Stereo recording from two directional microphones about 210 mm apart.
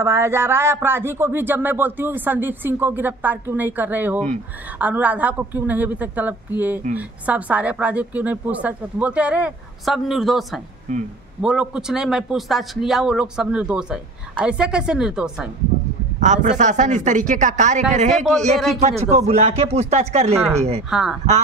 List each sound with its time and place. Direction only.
0.0 s a man's voice: 15° right (ahead or behind)
16.2 s speech: 35° right (ahead or behind)
20.9 s a man's voice: 5° right (ahead or behind)